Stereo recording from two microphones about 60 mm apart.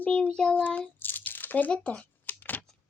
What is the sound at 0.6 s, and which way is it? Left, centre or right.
Speech, left.